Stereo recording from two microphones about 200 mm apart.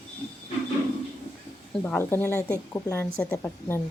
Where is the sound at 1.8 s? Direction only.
10° left (ahead or behind).